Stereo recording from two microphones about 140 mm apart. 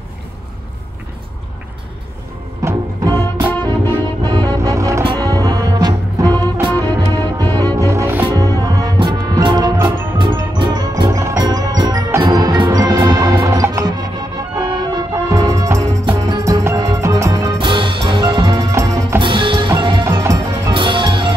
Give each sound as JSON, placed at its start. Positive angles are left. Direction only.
{"t": 2.6, "sound": "music", "side_deg": -25}
{"t": 3.4, "sound": "music", "side_deg": 15}
{"t": 4.2, "sound": "music", "side_deg": -30}
{"t": 7.6, "sound": "music", "side_deg": -20}
{"t": 17.6, "sound": "music", "side_deg": -35}
{"t": 19.1, "sound": "music", "side_deg": -35}
{"t": 20.1, "sound": "music", "side_deg": -20}
{"t": 20.7, "sound": "music", "side_deg": -35}